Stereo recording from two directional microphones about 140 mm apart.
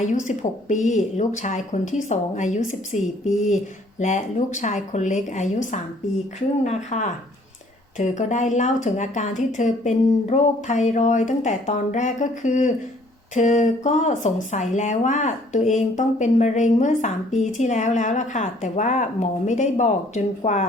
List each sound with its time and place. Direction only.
0.0 s speech: 60° left (ahead or behind)